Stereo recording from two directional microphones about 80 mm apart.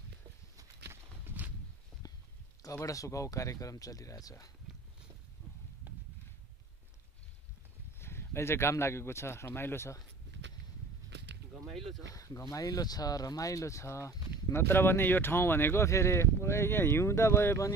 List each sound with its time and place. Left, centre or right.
1.2 s walk: right
2.0 s a sound: left
2.6 s speech: left
8.0 s speech: left
12.1 s speech: left
14.5 s speech: left